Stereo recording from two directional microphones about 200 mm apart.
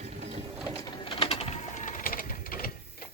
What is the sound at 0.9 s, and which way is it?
Bird, 25° left (ahead or behind).